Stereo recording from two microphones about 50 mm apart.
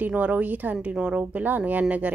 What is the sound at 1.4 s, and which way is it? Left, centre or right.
Speech, right.